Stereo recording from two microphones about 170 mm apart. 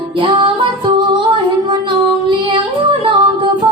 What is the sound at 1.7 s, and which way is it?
Music, 30° right (ahead or behind).